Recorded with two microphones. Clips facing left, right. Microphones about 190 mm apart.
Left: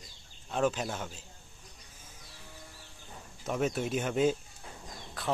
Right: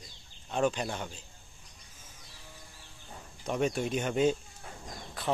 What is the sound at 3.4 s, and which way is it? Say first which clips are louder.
Speech: right 1 dB; centre (ahead or behind).